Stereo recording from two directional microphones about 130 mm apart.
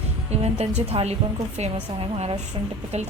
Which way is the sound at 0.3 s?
55° right (ahead or behind).